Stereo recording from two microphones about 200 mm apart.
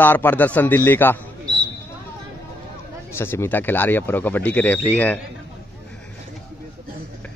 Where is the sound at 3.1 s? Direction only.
10° left (ahead or behind).